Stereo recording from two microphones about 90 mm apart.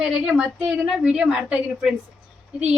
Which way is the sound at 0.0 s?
10° right (ahead or behind).